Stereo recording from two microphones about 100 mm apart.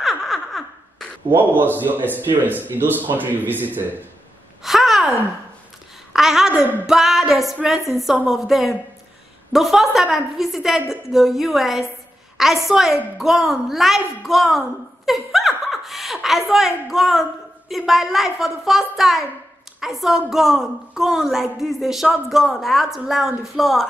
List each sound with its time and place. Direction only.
0.0 s laughter: centre (ahead or behind)
1.3 s a man's voice: 20° right (ahead or behind)
4.6 s gasp: centre (ahead or behind)
6.1 s a woman's voice: 5° right (ahead or behind)